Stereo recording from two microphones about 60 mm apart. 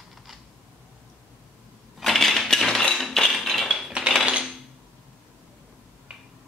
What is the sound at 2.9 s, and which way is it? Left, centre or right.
Music, centre.